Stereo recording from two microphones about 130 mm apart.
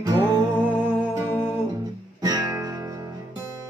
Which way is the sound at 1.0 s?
10° left (ahead or behind).